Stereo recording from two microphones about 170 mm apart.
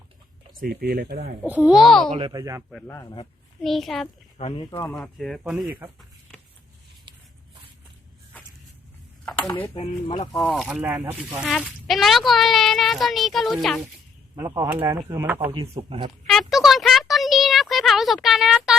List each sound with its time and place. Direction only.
0.5 s speech: 60° right (ahead or behind)
1.4 s speech: 10° right (ahead or behind)
2.1 s speech: 25° right (ahead or behind)
2.8 s a man's voice: 15° left (ahead or behind)
3.6 s speech: centre (ahead or behind)
4.4 s speech: 35° left (ahead or behind)
4.7 s a man's voice: 15° left (ahead or behind)
4.9 s speech: centre (ahead or behind)
9.4 s speech: 30° left (ahead or behind)
10.3 s speech: centre (ahead or behind)
14.3 s speech: 15° right (ahead or behind)
15.4 s a man's voice: 35° right (ahead or behind)
16.2 s a sound: centre (ahead or behind)